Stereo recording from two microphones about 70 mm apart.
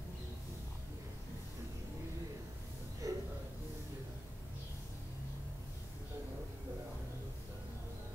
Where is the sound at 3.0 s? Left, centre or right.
Right.